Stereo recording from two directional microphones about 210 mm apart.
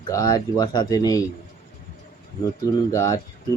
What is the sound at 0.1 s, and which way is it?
Speech, 15° left (ahead or behind).